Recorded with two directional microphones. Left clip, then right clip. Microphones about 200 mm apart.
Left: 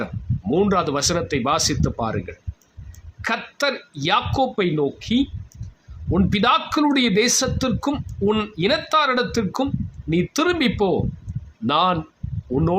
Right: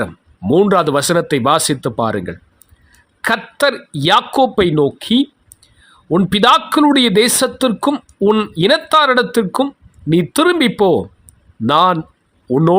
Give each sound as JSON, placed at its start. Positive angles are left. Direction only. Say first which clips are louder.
{"t": 0.5, "sound": "speech", "louder": "right 8 dB", "side_deg": -40}